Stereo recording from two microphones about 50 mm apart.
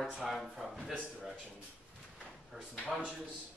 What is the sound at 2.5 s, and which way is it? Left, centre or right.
Speech, centre.